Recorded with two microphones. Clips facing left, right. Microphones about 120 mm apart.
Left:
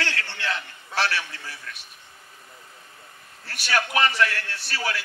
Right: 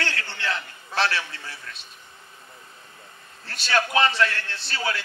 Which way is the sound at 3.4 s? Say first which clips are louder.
Right 2 dB; 25° right (ahead or behind).